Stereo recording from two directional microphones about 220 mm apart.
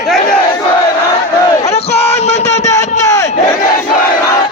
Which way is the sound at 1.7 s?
30° left (ahead or behind).